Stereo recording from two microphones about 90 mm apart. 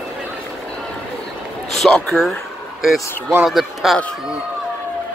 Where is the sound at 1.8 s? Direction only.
5° left (ahead or behind).